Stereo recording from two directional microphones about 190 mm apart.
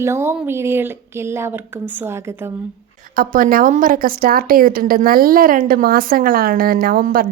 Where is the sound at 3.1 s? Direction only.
50° right (ahead or behind).